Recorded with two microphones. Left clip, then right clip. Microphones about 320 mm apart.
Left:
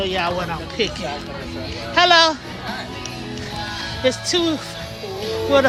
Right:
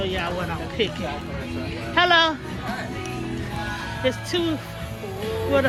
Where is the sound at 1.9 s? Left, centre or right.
Centre.